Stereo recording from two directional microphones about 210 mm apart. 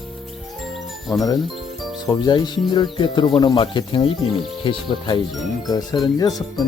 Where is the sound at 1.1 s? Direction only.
20° left (ahead or behind).